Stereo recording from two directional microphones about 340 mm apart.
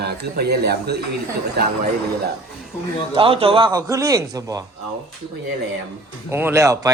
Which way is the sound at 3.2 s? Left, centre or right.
Centre.